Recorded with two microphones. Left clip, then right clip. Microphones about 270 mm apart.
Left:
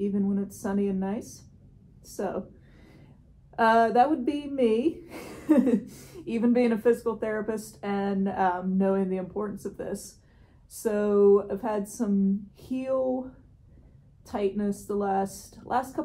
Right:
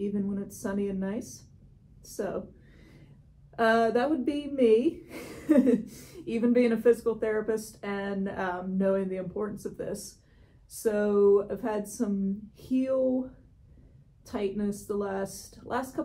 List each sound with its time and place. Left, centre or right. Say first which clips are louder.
0.0 s a woman's voice: left 4 dB; centre
3.5 s speech: left 4 dB; centre
14.2 s speech: left 3 dB; centre